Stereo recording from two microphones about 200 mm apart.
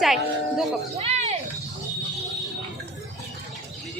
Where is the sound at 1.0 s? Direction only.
30° right (ahead or behind).